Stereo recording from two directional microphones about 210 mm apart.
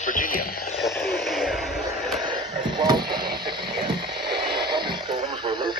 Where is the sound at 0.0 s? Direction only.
40° left (ahead or behind).